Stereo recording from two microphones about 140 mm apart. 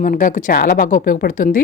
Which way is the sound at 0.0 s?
70° left (ahead or behind).